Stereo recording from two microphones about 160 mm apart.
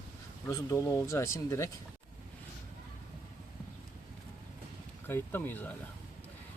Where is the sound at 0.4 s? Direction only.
20° left (ahead or behind).